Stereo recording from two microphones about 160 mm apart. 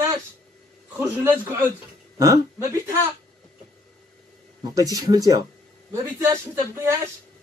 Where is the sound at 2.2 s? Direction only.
20° right (ahead or behind).